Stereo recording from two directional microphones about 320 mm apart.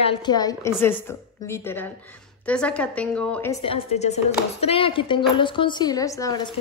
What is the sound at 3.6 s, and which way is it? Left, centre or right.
A woman's voice, centre.